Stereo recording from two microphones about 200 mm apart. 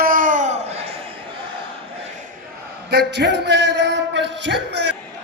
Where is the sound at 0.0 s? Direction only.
45° right (ahead or behind).